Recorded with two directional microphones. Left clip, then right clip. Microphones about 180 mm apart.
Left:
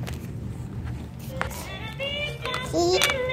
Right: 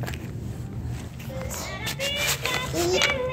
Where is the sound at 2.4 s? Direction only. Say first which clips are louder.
Left 1 dB; 35° left (ahead or behind).